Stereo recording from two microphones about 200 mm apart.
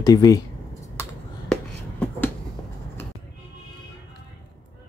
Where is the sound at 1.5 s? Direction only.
5° left (ahead or behind).